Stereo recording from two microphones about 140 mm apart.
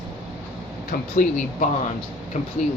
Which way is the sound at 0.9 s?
75° left (ahead or behind).